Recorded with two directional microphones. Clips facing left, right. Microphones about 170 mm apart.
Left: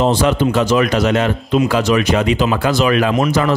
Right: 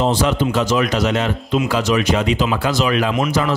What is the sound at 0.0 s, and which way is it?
Speech, 60° left (ahead or behind).